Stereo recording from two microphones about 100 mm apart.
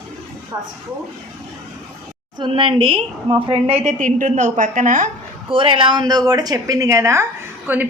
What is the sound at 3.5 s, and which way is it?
Speech, 85° right.